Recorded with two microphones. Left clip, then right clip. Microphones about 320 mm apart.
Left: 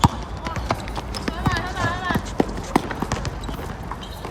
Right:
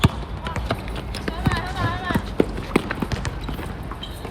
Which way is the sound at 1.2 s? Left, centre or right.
Left.